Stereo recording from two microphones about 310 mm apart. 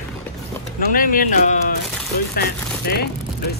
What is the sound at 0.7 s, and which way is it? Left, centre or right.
Speech, left.